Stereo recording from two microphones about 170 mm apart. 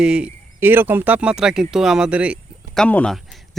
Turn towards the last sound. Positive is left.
turn(degrees=0)  # may be behind; listen again after turning